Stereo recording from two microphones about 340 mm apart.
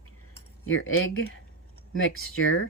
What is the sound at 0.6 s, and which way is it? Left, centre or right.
Speech, left.